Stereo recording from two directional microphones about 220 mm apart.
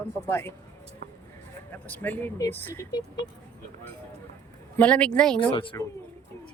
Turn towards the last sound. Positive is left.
turn(degrees=20)  # may be behind; listen again after turning